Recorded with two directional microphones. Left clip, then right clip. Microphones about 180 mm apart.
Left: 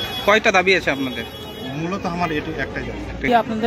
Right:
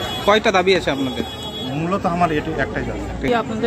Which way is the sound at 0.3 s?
Centre (ahead or behind).